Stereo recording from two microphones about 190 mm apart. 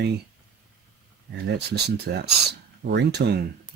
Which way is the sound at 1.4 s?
60° right (ahead or behind).